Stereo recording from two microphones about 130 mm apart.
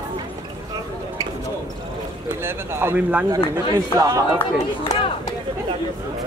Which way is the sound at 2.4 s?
15° right (ahead or behind).